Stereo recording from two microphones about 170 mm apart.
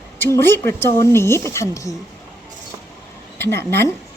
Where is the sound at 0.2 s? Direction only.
15° left (ahead or behind).